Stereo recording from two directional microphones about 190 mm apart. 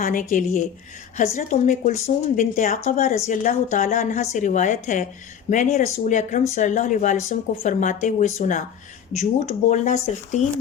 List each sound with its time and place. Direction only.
0.0 s a woman's voice: 45° left (ahead or behind)